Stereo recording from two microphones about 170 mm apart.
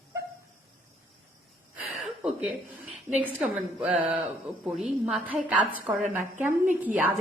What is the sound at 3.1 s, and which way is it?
A woman's voice, 5° right (ahead or behind).